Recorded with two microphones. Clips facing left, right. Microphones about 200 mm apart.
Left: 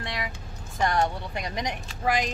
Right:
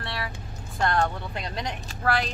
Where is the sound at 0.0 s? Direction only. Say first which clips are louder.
Even; 15° left (ahead or behind).